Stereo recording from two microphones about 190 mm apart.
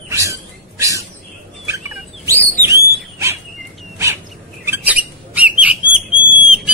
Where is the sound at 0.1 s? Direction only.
15° right (ahead or behind).